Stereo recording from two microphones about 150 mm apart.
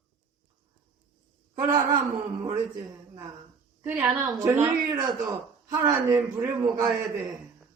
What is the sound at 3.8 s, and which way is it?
A woman's voice, 10° right (ahead or behind).